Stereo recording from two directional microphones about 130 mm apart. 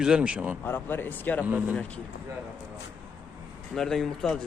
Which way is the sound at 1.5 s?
15° right (ahead or behind).